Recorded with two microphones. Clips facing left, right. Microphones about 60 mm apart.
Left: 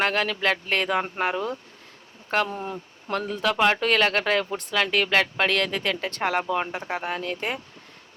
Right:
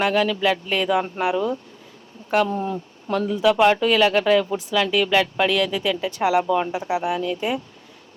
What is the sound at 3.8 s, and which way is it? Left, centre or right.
Speech, left.